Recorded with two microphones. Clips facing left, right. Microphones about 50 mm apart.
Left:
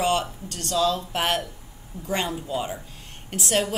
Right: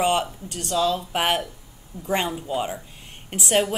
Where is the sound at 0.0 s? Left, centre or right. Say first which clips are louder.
Right 2 dB; centre.